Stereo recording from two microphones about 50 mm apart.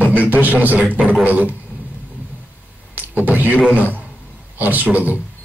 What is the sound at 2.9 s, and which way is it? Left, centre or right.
Speech, right.